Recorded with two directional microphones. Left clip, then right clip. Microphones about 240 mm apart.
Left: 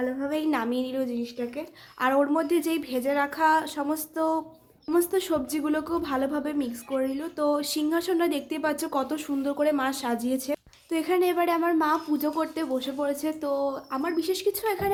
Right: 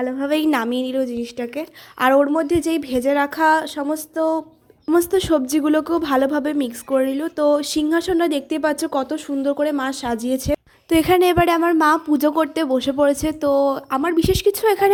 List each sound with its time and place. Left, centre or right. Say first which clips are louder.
0.0 s a woman's voice: right 8 dB; right